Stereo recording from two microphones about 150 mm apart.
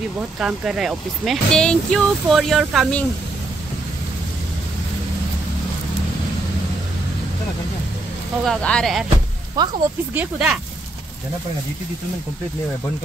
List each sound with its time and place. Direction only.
0.4 s speech: 5° right (ahead or behind)
8.5 s speech: 5° left (ahead or behind)
9.6 s speech: 30° right (ahead or behind)
10.1 s speech: 5° right (ahead or behind)